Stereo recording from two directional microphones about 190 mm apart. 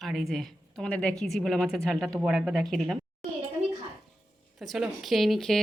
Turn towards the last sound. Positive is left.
turn(degrees=0)  # may be behind; listen again after turning